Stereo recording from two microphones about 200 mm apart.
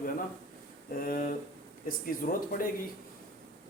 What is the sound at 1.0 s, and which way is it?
Speech, 45° left (ahead or behind).